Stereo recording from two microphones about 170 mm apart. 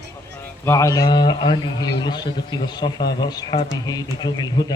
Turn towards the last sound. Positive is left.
turn(degrees=25)  # may be behind; listen again after turning